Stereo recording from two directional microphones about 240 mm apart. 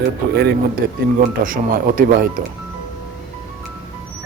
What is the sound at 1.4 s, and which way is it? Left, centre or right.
Speech, right.